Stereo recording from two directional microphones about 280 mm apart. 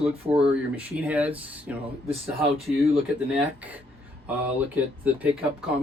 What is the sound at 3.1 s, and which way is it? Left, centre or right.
Speech, centre.